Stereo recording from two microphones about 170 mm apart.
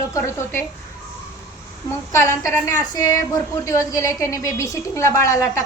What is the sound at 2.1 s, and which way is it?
A woman's voice, 15° left (ahead or behind).